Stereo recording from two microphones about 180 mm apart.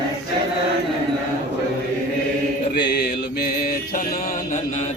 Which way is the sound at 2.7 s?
70° left (ahead or behind).